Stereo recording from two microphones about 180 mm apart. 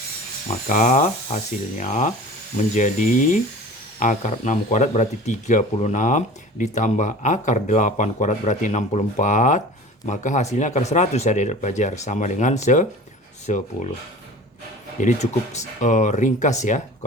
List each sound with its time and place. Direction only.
0.7 s speech: 45° left (ahead or behind)
15.0 s speech: 40° left (ahead or behind)